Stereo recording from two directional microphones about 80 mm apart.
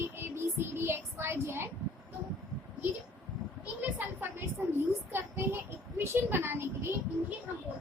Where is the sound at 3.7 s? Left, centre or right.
Right.